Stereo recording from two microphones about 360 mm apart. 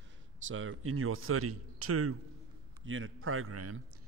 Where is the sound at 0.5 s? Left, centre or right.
Right.